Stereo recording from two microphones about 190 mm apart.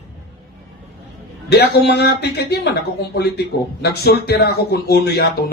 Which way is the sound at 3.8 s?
55° left (ahead or behind).